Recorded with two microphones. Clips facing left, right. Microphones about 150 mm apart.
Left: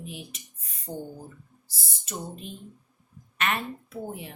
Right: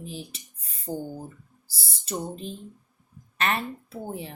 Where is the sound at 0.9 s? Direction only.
5° right (ahead or behind).